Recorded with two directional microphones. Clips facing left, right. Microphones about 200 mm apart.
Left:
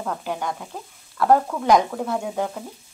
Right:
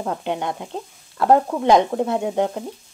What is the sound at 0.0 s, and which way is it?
Frying, 25° right (ahead or behind).